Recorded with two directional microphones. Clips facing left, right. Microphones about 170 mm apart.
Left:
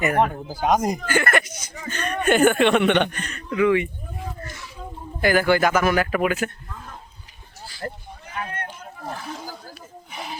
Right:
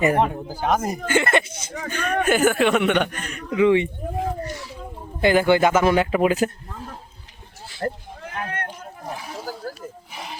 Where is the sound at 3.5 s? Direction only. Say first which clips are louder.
Right 2 dB; 25° right (ahead or behind).